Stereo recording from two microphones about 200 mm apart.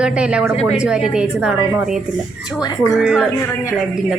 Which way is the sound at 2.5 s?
20° left (ahead or behind).